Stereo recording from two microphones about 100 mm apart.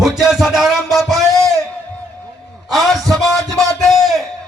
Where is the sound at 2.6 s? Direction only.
Centre (ahead or behind).